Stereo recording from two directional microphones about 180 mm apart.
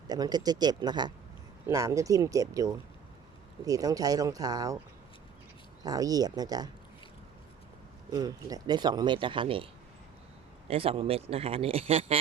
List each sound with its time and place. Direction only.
0.1 s speech: 20° right (ahead or behind)
5.8 s speech: 20° right (ahead or behind)
8.1 s speech: 20° right (ahead or behind)
10.7 s speech: 30° right (ahead or behind)